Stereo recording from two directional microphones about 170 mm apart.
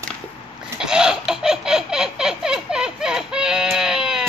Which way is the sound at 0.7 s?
5° right (ahead or behind).